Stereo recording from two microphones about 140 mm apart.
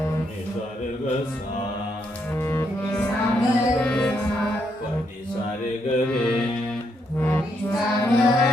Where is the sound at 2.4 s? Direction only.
15° left (ahead or behind).